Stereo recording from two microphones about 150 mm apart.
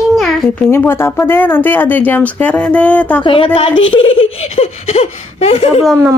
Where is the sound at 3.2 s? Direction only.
35° left (ahead or behind).